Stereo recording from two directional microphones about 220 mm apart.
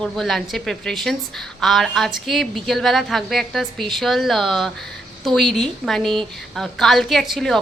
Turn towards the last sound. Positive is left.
turn(degrees=0)  # may be behind; listen again after turning